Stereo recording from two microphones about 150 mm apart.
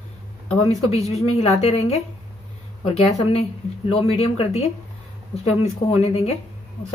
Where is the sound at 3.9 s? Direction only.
45° left (ahead or behind).